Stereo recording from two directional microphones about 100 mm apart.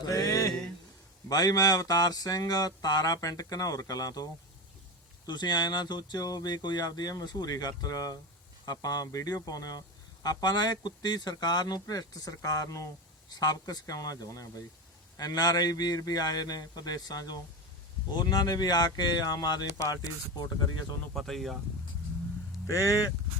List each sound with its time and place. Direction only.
0.0 s a sound: 35° left (ahead or behind)
1.3 s speech: 40° left (ahead or behind)
21.1 s speech: 5° left (ahead or behind)
22.6 s speech: 30° left (ahead or behind)